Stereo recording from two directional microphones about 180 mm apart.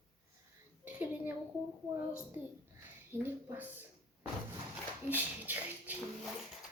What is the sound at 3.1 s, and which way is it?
Speech, 10° right (ahead or behind).